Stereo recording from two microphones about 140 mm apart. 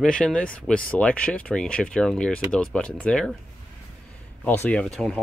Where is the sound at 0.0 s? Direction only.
5° left (ahead or behind).